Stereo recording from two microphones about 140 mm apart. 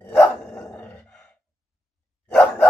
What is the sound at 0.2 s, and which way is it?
Dog, 15° left (ahead or behind).